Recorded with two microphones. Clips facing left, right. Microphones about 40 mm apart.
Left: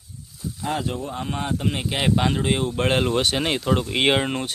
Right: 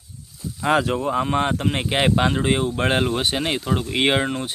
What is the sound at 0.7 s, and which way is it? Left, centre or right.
Speech, right.